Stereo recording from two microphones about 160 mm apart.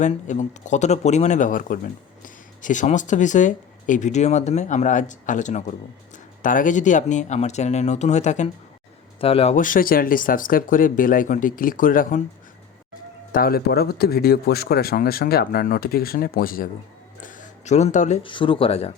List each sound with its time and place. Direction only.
0.0 s speech: 45° left (ahead or behind)
9.6 s speech: 60° left (ahead or behind)
13.3 s speech: 70° left (ahead or behind)
17.2 s a sound: 50° left (ahead or behind)
18.2 s speech: 30° left (ahead or behind)